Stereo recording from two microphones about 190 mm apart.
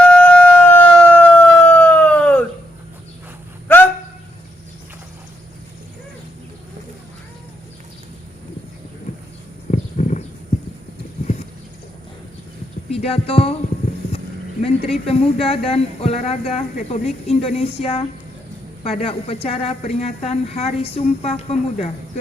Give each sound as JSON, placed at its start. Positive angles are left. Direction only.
{"t": 0.0, "sound": "siren", "side_deg": 5}
{"t": 9.1, "sound": "a sound", "side_deg": 35}
{"t": 9.7, "sound": "horse", "side_deg": 40}
{"t": 12.9, "sound": "music", "side_deg": 30}
{"t": 14.0, "sound": "a sound", "side_deg": 30}
{"t": 14.8, "sound": "a woman's voice", "side_deg": 35}